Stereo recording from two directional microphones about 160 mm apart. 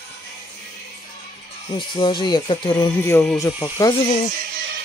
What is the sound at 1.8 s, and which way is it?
Speech, 30° left (ahead or behind).